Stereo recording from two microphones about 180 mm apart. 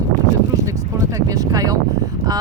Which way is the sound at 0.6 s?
20° right (ahead or behind).